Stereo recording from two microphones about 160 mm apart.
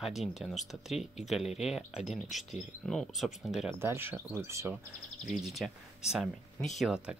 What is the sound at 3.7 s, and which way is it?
Speech, 15° right (ahead or behind).